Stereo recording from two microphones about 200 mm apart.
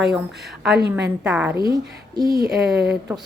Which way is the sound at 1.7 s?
20° right (ahead or behind).